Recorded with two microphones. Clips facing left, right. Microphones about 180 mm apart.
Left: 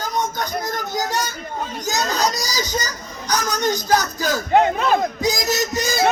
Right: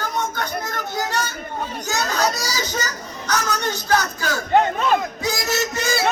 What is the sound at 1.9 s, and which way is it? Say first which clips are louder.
Baby cry: even; 60° right (ahead or behind).